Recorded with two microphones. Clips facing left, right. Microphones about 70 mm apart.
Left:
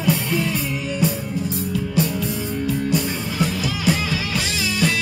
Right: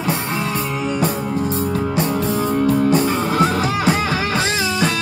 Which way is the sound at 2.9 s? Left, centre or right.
Right.